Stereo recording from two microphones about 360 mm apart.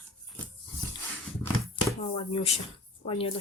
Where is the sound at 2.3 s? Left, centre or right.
Centre.